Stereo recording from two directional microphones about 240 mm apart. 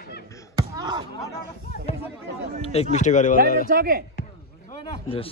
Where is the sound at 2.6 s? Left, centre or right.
Left.